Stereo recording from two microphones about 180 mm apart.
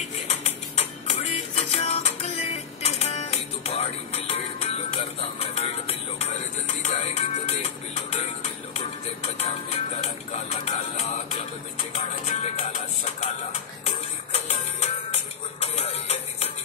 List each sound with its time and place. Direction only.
0.0 s music: 40° left (ahead or behind)